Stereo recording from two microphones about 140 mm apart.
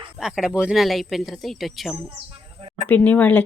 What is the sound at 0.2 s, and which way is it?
Speech, 5° right (ahead or behind).